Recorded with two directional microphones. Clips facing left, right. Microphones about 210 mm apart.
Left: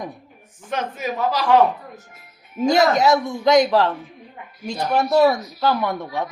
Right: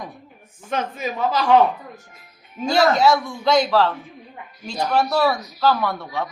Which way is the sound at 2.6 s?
20° left (ahead or behind).